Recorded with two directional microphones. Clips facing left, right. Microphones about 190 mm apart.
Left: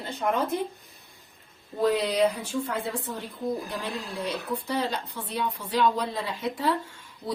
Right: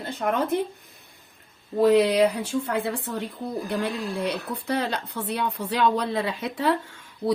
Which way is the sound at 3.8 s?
70° right (ahead or behind).